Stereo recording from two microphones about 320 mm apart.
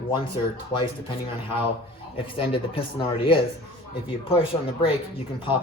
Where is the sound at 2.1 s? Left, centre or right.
Centre.